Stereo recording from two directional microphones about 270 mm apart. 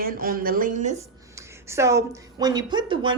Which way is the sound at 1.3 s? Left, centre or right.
Centre.